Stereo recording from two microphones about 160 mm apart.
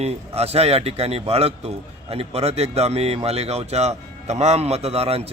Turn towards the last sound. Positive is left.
turn(degrees=-40)  # may be behind; listen again after turning